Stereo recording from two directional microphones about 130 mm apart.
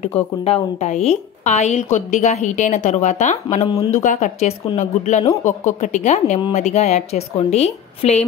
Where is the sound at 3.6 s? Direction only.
40° left (ahead or behind).